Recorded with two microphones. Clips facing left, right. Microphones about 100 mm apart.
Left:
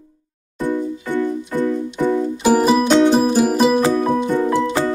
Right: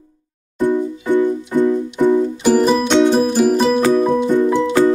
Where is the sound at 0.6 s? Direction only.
20° right (ahead or behind).